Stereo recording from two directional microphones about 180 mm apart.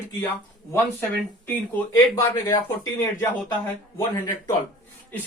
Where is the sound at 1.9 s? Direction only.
20° left (ahead or behind).